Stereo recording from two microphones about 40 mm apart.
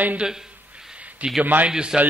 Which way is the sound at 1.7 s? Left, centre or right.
Right.